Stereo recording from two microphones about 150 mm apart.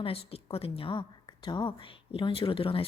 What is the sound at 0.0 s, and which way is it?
A woman's voice, 40° left (ahead or behind).